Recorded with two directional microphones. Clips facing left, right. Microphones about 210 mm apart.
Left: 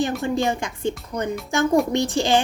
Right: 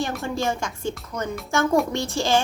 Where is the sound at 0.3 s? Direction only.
15° left (ahead or behind).